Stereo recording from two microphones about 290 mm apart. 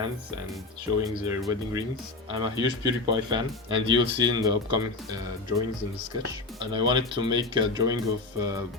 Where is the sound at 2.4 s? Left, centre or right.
Centre.